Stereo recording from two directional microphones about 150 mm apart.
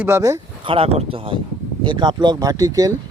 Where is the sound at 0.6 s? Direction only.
35° right (ahead or behind).